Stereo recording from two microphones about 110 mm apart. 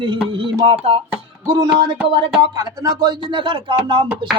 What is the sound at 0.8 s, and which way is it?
Speech, 60° right (ahead or behind).